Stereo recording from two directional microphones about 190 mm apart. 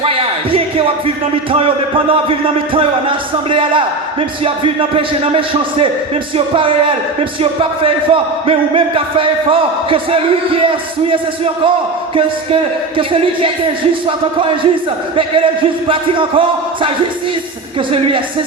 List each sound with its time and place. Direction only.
0.0 s music: 30° right (ahead or behind)
1.5 s a man's voice: 30° right (ahead or behind)
7.9 s a man's voice: 30° right (ahead or behind)
13.0 s a man's voice: 30° right (ahead or behind)
15.9 s a man's voice: 25° right (ahead or behind)
17.9 s a man's voice: 25° right (ahead or behind)